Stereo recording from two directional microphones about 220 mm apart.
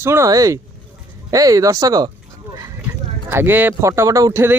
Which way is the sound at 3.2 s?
10° right (ahead or behind).